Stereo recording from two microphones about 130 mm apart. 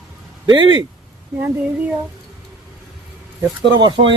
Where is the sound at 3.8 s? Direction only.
35° right (ahead or behind).